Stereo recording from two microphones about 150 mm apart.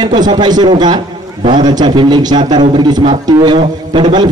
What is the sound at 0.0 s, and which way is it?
A man's voice, 30° right (ahead or behind).